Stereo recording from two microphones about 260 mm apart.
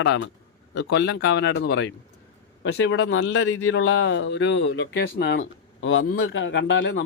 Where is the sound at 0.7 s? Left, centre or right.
Left.